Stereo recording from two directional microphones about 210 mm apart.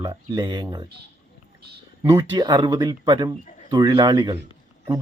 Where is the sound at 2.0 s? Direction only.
15° right (ahead or behind).